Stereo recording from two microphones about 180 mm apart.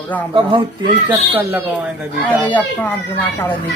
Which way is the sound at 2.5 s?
10° left (ahead or behind).